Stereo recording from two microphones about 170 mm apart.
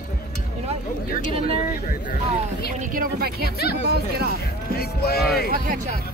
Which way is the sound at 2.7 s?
60° right (ahead or behind).